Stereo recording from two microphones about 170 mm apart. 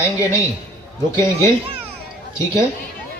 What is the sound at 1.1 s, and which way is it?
Speech, 15° left (ahead or behind).